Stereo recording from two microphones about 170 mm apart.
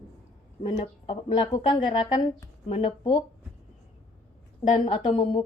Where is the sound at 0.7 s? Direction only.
30° left (ahead or behind).